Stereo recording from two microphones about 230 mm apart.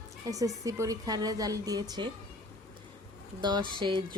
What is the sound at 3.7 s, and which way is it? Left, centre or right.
Music, centre.